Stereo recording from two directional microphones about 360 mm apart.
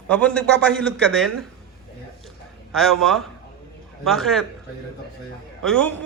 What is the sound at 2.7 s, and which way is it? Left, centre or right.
A man's voice, centre.